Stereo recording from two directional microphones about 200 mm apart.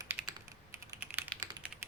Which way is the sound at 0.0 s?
15° right (ahead or behind).